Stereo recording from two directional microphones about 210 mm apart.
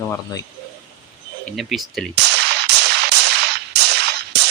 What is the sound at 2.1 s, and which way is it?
Music, 50° right (ahead or behind).